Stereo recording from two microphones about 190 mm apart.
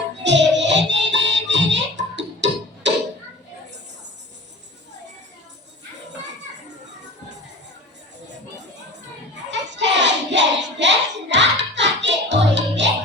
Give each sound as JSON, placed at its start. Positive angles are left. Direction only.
{"t": 0.2, "sound": "music", "side_deg": -70}
{"t": 9.5, "sound": "hands", "side_deg": -65}